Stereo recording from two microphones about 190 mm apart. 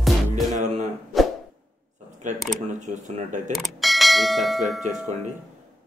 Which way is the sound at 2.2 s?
40° right (ahead or behind).